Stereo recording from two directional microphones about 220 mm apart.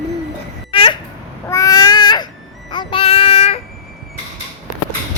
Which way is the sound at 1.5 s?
15° left (ahead or behind).